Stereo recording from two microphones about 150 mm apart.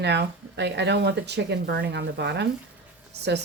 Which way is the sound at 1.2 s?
90° right.